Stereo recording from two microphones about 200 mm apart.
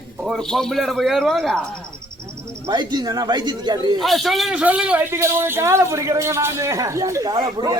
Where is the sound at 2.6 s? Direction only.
20° right (ahead or behind).